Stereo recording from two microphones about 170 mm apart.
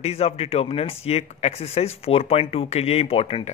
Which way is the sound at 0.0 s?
35° left (ahead or behind).